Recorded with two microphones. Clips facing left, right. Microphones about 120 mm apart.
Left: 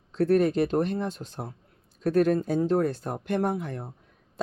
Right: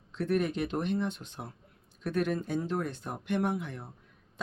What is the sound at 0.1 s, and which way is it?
Speech, 35° left (ahead or behind).